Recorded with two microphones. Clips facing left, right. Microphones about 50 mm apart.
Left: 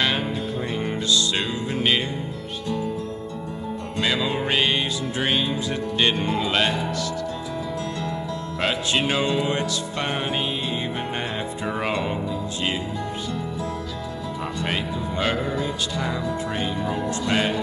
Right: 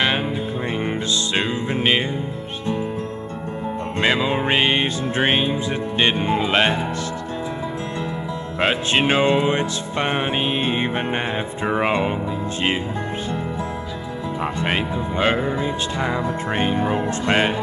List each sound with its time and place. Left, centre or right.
0.8 s music: right
4.0 s speech: right
8.5 s speech: right
11.6 s music: right
14.4 s speech: right